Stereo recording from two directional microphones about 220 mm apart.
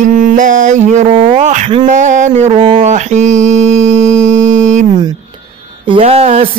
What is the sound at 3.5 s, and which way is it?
Music, 60° right (ahead or behind).